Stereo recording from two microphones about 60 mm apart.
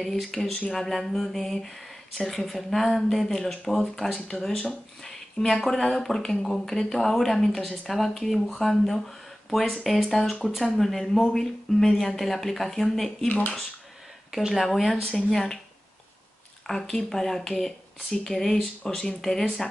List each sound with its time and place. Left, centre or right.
0.0 s speech: centre
13.3 s speech: left
14.3 s speech: centre
16.6 s speech: centre